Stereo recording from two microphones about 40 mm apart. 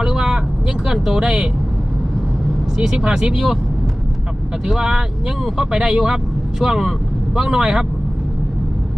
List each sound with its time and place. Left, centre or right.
0.0 s vehicle: centre
2.7 s speech: centre
4.6 s speech: centre